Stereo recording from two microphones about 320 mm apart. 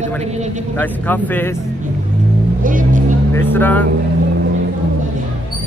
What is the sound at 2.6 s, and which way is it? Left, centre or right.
Vehicle, right.